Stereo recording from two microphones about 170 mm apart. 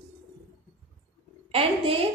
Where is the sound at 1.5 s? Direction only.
35° right (ahead or behind).